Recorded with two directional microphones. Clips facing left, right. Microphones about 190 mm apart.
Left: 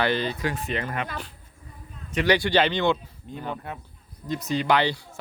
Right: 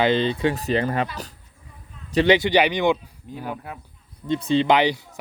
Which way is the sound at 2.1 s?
30° right (ahead or behind).